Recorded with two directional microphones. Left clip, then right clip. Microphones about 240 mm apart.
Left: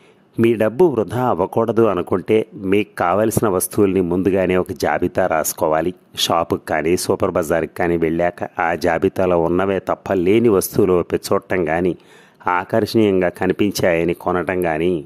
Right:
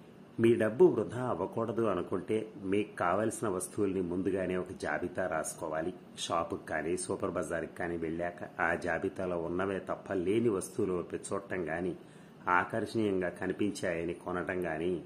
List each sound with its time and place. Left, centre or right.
0.4 s speech: left